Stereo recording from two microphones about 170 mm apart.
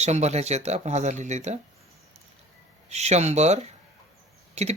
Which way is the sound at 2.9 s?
40° right (ahead or behind).